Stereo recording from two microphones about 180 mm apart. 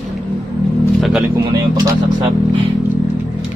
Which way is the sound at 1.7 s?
20° right (ahead or behind).